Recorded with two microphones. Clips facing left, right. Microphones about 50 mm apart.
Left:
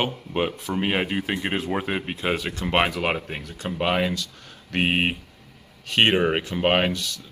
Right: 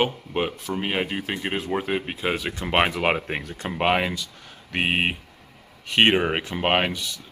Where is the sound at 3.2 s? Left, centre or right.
Right.